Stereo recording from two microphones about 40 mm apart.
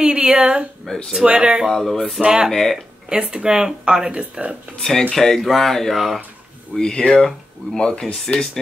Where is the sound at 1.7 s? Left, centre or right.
Centre.